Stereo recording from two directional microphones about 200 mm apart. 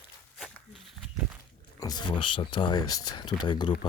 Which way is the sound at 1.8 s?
20° left (ahead or behind).